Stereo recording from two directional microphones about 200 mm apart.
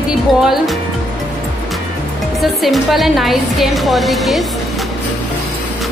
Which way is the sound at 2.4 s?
Centre (ahead or behind).